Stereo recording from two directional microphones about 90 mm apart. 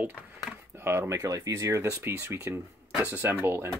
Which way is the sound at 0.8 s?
30° right (ahead or behind).